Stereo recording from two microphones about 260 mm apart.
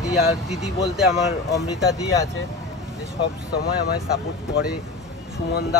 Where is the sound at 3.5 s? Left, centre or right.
Left.